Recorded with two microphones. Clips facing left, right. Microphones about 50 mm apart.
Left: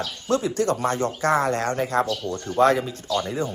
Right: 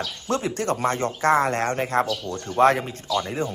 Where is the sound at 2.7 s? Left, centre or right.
Right.